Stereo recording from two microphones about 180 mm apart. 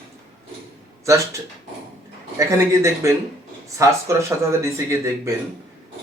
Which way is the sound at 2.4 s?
15° right (ahead or behind).